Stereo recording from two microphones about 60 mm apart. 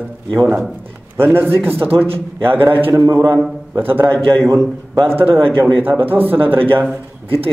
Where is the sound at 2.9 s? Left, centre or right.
Right.